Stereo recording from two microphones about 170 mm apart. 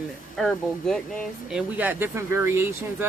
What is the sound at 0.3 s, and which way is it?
Speech, centre (ahead or behind).